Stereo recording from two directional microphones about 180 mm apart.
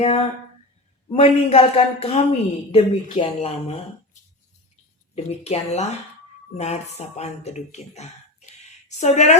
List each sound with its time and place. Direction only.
0.0 s speech: 35° left (ahead or behind)